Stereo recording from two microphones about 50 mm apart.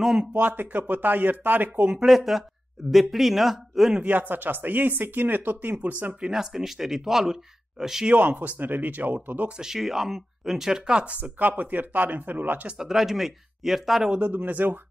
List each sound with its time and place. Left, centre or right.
0.0 s speech: centre
0.3 s speech: right
2.0 s speech: centre
4.1 s speech: right
6.3 s speech: centre
8.1 s speech: right
9.6 s speech: centre
11.3 s speech: right
12.7 s speech: centre
14.2 s speech: right